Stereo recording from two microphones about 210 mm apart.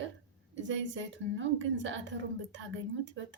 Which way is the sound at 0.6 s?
60° right (ahead or behind).